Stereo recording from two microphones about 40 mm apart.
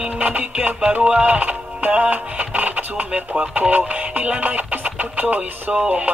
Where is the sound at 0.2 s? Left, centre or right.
Right.